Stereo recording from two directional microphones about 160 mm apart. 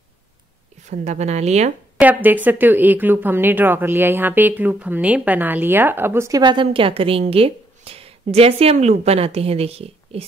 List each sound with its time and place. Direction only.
0.8 s speech: 45° right (ahead or behind)
2.0 s speech: 10° right (ahead or behind); by 10.2 s 40° right (ahead or behind)